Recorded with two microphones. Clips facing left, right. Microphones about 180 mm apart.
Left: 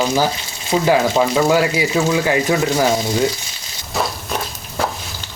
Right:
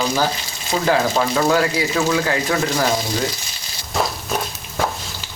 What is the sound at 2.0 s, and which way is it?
Speech, 20° left (ahead or behind).